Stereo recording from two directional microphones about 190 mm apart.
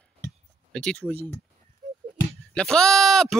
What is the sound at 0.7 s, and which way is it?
Speech, 5° left (ahead or behind).